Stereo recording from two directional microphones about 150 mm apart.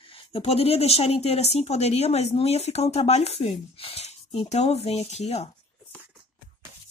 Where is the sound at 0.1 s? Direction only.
40° left (ahead or behind).